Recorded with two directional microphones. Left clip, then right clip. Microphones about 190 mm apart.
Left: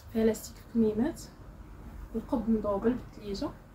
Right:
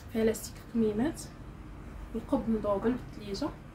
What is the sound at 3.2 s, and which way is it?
Speech, 15° right (ahead or behind).